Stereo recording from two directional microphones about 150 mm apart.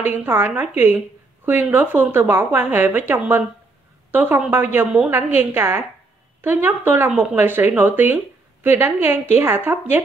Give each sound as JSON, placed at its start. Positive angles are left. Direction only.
{"t": 0.0, "sound": "a woman's voice", "side_deg": -15}